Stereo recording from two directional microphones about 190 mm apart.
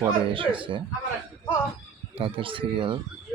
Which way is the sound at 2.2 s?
30° right (ahead or behind).